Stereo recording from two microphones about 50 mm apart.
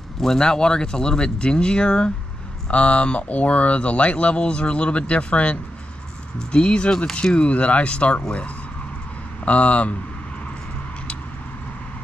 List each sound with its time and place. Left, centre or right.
0.2 s speech: centre
9.4 s speech: left